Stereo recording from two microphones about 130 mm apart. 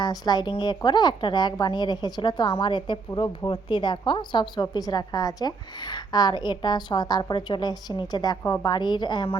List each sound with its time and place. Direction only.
0.0 s a woman's voice: 30° left (ahead or behind)